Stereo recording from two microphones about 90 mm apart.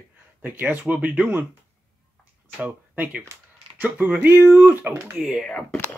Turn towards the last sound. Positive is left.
turn(degrees=15)  # may be behind; listen again after turning